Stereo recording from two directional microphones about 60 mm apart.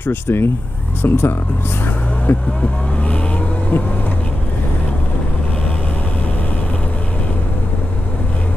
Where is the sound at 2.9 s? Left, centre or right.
Left.